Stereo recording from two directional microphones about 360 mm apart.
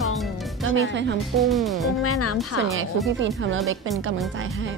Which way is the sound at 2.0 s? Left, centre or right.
Left.